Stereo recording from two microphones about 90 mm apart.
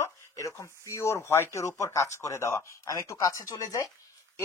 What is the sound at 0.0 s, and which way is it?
Speech, 35° left (ahead or behind).